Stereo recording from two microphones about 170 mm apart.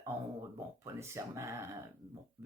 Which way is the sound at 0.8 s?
15° right (ahead or behind).